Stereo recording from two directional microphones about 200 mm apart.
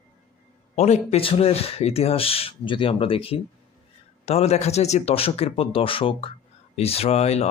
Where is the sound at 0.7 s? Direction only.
35° left (ahead or behind).